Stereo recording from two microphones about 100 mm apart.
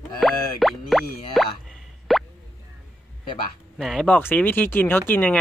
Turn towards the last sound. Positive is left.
turn(degrees=20)  # may be behind; listen again after turning